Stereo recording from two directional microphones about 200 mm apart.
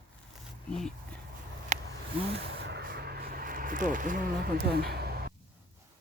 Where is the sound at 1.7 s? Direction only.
35° right (ahead or behind).